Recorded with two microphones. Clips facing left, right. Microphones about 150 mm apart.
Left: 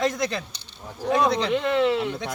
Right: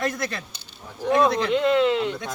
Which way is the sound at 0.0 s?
20° left (ahead or behind).